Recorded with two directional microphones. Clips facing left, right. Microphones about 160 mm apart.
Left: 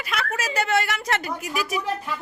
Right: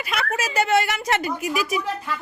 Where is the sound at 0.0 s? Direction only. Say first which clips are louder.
Right 2 dB; 20° right (ahead or behind).